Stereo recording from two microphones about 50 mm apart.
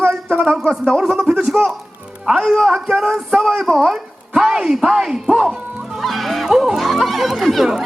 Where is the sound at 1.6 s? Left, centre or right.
Right.